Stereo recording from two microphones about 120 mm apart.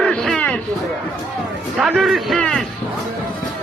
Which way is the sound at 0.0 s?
5° left (ahead or behind).